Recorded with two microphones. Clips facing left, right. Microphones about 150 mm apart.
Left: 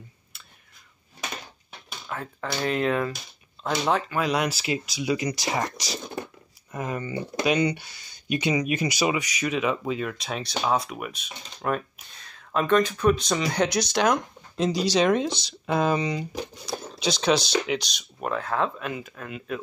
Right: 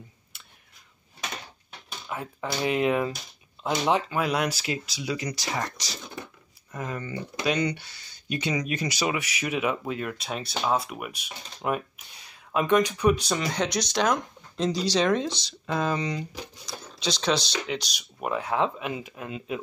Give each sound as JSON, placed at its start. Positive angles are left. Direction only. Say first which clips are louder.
{"t": 2.0, "sound": "speech", "louder": "even", "side_deg": -10}
{"t": 4.6, "sound": "speech", "louder": "left 3 dB", "side_deg": 10}
{"t": 9.1, "sound": "speech", "louder": "left 2 dB", "side_deg": -10}